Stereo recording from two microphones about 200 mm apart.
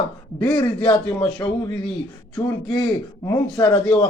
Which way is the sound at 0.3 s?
5° left (ahead or behind).